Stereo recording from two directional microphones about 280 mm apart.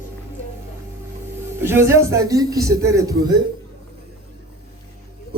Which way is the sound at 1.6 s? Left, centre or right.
Centre.